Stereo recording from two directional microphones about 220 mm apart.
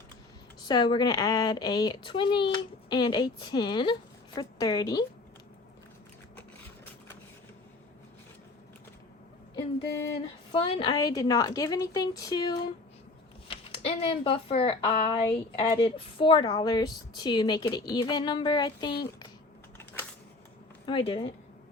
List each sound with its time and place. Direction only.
0.6 s a woman's voice: 20° left (ahead or behind)
9.6 s a sound: 20° left (ahead or behind)
10.5 s a woman's voice: 25° left (ahead or behind)
20.9 s speech: 20° left (ahead or behind)